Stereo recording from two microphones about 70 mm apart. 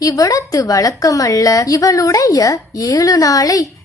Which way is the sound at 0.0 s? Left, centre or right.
Left.